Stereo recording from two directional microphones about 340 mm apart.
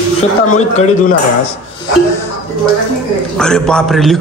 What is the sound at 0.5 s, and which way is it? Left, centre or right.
Speech, left.